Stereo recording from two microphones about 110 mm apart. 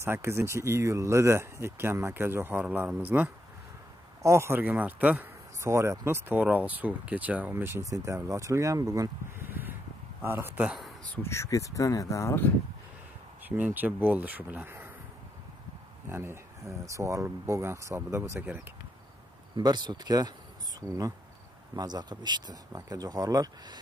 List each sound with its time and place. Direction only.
0.0 s speech: 20° right (ahead or behind)
5.6 s speech: 25° right (ahead or behind)
11.1 s speech: 25° left (ahead or behind)
13.5 s speech: 15° right (ahead or behind)
16.1 s speech: 20° right (ahead or behind)
19.5 s speech: 40° right (ahead or behind)
22.7 s speech: 30° right (ahead or behind)